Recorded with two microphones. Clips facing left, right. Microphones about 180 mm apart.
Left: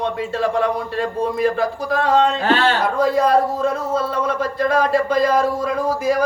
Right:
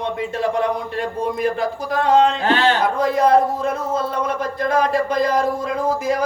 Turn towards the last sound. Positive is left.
turn(degrees=-20)  # may be behind; listen again after turning